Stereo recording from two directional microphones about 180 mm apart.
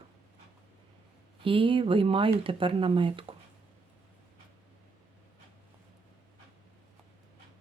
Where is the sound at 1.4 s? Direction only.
30° right (ahead or behind).